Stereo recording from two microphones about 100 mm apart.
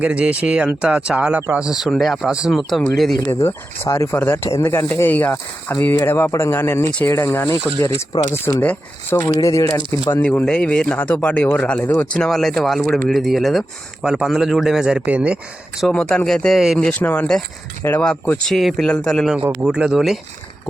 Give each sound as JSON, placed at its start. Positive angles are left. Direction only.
{"t": 0.0, "sound": "speech", "side_deg": -15}
{"t": 1.6, "sound": "speech", "side_deg": -5}
{"t": 3.4, "sound": "speech", "side_deg": 25}
{"t": 8.6, "sound": "speech", "side_deg": 15}
{"t": 9.2, "sound": "speech", "side_deg": 35}
{"t": 10.4, "sound": "speech", "side_deg": 10}
{"t": 15.9, "sound": "speech", "side_deg": 10}
{"t": 16.8, "sound": "speech", "side_deg": 15}
{"t": 19.6, "sound": "speech", "side_deg": -5}